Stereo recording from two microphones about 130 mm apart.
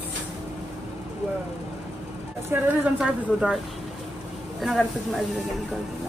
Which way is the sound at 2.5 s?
15° right (ahead or behind).